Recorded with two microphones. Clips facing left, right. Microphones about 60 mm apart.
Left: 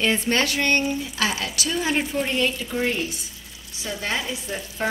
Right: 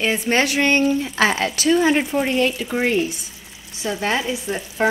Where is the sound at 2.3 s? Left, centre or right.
Right.